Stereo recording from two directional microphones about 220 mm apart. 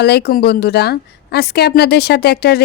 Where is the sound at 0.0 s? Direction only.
45° left (ahead or behind).